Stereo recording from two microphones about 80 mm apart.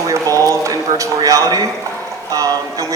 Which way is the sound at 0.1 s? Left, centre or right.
Right.